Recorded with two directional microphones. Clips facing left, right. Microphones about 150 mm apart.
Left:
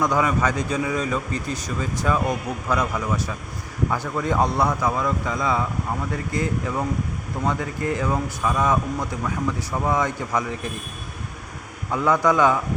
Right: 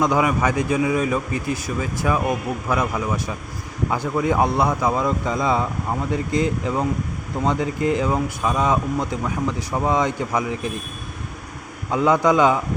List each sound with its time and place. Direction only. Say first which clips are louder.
0.0 s a man's voice: right 2 dB; 15° right (ahead or behind)
11.9 s a man's voice: right 2 dB; 20° right (ahead or behind)